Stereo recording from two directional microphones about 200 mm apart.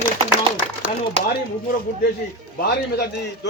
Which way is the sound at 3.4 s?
60° left (ahead or behind).